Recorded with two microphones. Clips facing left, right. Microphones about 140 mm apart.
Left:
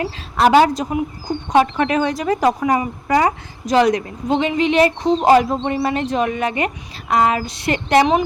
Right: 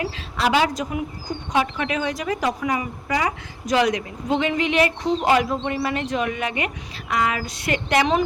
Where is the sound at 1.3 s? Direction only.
55° left (ahead or behind); by 4.4 s 35° left (ahead or behind).